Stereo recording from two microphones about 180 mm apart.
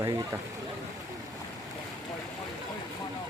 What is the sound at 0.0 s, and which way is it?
Speech, 20° right (ahead or behind).